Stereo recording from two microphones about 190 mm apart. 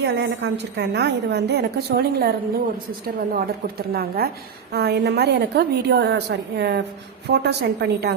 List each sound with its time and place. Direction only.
0.0 s a woman's voice: 65° right (ahead or behind)
3.3 s a woman's voice: 55° right (ahead or behind)